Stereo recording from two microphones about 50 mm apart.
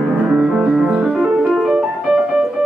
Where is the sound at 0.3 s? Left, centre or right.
Centre.